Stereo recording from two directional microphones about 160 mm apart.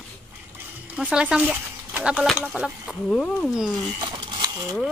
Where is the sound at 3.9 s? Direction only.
25° right (ahead or behind).